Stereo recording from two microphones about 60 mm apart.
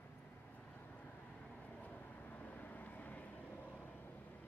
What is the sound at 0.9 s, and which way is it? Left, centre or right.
Vehicle, left.